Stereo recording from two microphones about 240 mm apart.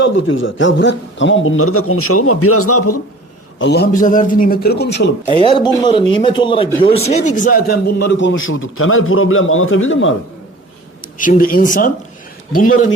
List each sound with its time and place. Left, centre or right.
0.0 s a man's voice: left
3.6 s a man's voice: left
5.2 s a man's voice: left
11.0 s speech: left